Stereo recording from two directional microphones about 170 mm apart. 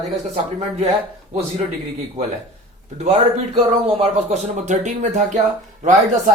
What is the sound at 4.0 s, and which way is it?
Speech, 40° right (ahead or behind).